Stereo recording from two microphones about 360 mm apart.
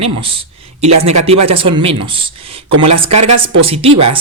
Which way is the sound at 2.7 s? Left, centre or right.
Right.